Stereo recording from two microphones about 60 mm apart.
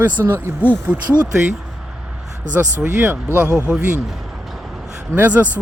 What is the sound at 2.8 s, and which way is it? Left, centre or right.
Speech, centre.